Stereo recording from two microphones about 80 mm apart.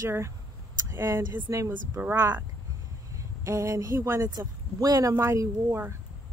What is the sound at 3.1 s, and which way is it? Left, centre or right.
Speech, right.